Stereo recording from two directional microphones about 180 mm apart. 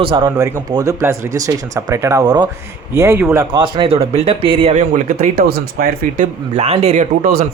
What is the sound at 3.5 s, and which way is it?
Speech, 25° right (ahead or behind).